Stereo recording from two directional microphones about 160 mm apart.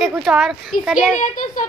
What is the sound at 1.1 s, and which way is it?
Speech, 55° left (ahead or behind).